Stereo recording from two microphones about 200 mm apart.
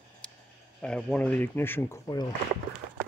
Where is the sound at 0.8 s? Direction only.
5° left (ahead or behind).